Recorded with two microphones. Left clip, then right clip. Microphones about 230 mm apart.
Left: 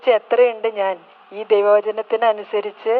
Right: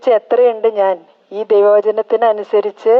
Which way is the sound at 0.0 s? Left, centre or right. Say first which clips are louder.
Right 4 dB; right.